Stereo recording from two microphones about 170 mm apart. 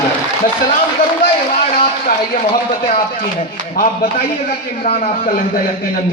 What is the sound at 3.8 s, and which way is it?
Mantra, 55° left (ahead or behind).